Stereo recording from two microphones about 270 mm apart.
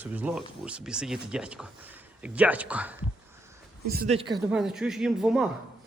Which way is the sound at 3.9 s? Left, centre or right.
Right.